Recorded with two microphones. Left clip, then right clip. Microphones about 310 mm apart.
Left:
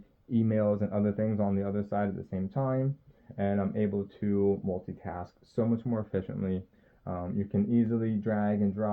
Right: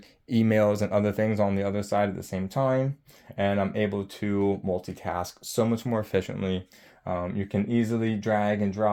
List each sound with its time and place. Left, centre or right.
0.3 s speech: right